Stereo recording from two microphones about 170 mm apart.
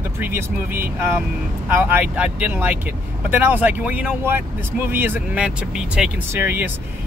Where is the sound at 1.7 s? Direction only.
10° right (ahead or behind).